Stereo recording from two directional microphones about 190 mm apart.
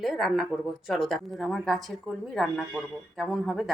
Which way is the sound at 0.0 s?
Centre (ahead or behind).